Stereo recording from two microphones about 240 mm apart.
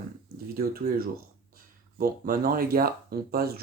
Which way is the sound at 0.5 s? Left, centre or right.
Right.